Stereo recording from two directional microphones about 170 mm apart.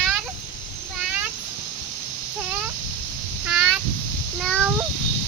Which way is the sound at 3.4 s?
5° right (ahead or behind).